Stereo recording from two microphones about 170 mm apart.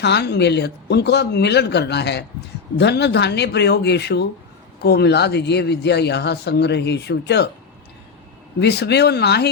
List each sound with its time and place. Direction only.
0.0 s speech: 75° left (ahead or behind)
8.5 s speech: 75° left (ahead or behind)